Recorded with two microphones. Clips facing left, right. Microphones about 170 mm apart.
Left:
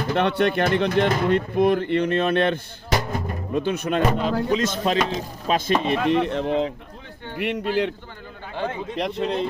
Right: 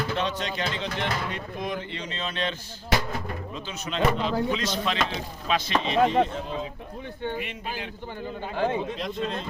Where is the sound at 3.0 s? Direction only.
50° left (ahead or behind).